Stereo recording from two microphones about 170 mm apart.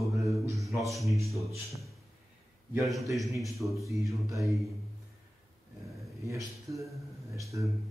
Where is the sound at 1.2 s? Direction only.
Centre (ahead or behind).